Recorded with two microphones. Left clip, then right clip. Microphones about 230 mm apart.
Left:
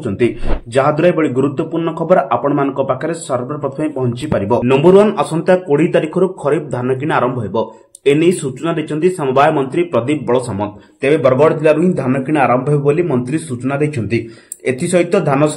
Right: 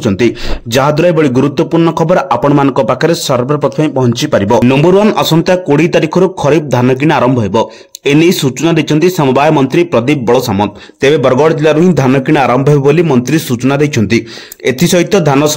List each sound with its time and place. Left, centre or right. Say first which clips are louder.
0.7 s a man's voice: right 4 dB; right